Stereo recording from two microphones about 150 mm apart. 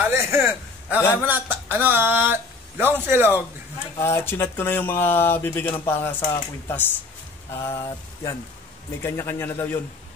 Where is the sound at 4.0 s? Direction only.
15° left (ahead or behind).